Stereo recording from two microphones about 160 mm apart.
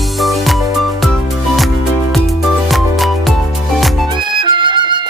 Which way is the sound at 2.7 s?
Centre (ahead or behind).